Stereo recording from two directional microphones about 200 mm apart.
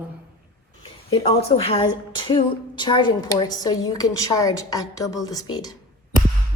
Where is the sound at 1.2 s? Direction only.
30° left (ahead or behind).